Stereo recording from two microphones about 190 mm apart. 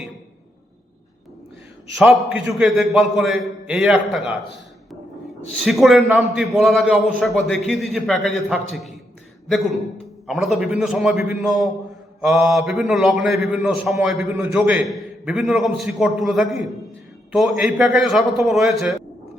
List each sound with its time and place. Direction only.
2.0 s a man's voice: centre (ahead or behind)
5.5 s a man's voice: centre (ahead or behind)
10.2 s a man's voice: centre (ahead or behind)